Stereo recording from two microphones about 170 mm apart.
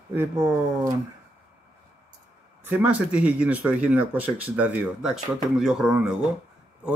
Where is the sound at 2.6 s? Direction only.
10° right (ahead or behind).